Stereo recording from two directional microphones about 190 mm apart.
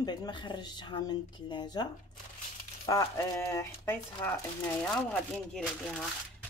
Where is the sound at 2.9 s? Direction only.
15° left (ahead or behind).